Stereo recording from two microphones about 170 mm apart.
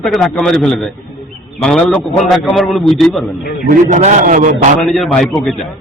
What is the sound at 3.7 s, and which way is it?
Speech, 50° right (ahead or behind).